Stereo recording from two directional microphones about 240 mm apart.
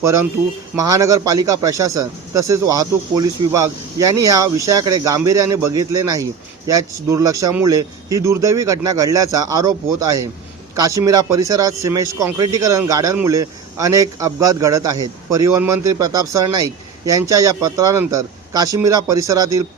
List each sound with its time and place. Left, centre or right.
0.8 s speech: centre